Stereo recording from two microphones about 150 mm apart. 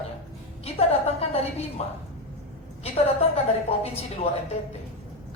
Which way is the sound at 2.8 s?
40° left (ahead or behind).